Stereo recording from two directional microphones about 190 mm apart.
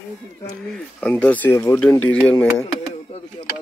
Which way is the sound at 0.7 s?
5° left (ahead or behind).